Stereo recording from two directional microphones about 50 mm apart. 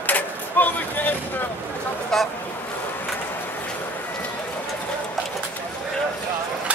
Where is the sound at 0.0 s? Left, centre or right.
Left.